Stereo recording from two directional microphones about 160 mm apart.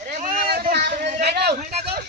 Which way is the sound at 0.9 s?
55° right (ahead or behind).